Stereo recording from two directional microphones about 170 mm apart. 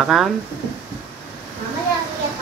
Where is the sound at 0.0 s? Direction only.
Centre (ahead or behind).